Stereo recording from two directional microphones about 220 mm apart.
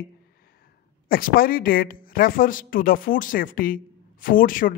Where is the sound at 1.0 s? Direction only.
40° left (ahead or behind).